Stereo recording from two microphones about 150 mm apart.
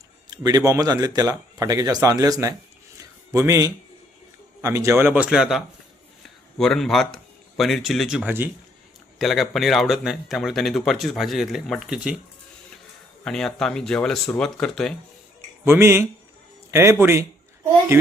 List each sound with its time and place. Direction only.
0.3 s speech: 25° right (ahead or behind); by 12.2 s 5° right (ahead or behind)
13.2 s speech: 5° left (ahead or behind)
15.6 s speech: 15° right (ahead or behind)